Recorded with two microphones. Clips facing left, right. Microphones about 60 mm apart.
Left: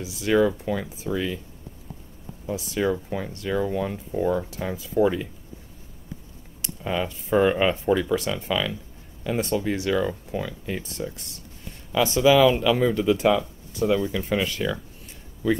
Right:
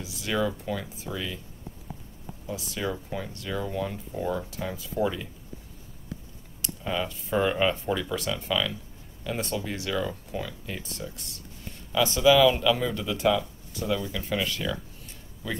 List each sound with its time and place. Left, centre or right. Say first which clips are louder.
0.0 s speech: left 7 dB; left
2.5 s speech: left 7 dB; left
6.6 s speech: left 3 dB; left
11.9 s speech: left 2 dB; left